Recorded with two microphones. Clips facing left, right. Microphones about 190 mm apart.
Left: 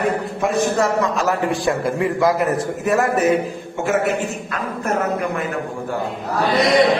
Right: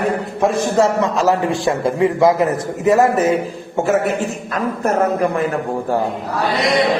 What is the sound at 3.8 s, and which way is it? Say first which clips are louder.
A man's voice: right 2 dB; 35° right (ahead or behind).